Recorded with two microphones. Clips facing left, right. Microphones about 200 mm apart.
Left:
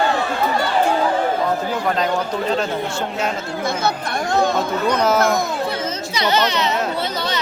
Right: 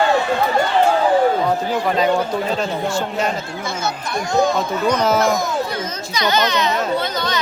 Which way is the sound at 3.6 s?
60° left (ahead or behind).